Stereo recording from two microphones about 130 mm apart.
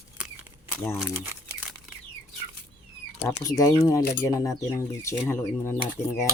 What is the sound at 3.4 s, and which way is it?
Speech, 30° left (ahead or behind).